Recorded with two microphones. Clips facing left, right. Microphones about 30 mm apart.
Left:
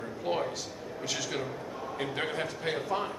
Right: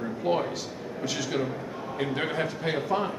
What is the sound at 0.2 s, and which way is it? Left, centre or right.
A man's voice, centre.